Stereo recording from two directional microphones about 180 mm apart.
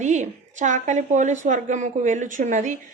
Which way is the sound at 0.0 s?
40° right (ahead or behind).